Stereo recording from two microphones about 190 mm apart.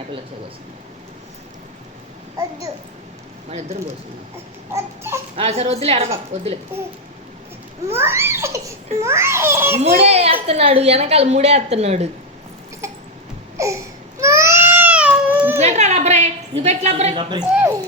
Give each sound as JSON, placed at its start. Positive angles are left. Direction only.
{"t": 4.7, "sound": "a child's voice", "side_deg": -15}
{"t": 5.4, "sound": "a woman's voice", "side_deg": -35}
{"t": 7.9, "sound": "a child's voice", "side_deg": -15}
{"t": 9.8, "sound": "a woman's voice", "side_deg": -35}
{"t": 13.6, "sound": "a sound", "side_deg": -15}
{"t": 14.2, "sound": "baby cry", "side_deg": -15}
{"t": 15.5, "sound": "a woman's voice", "side_deg": -35}